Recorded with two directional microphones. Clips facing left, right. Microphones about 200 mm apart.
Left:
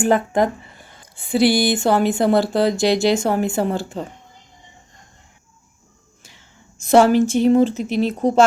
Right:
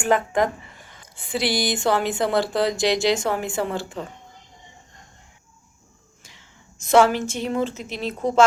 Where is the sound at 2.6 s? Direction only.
50° left (ahead or behind).